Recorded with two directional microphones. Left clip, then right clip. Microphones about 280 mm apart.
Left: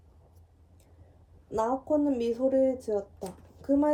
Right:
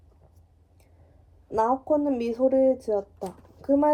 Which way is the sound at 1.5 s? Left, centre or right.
Right.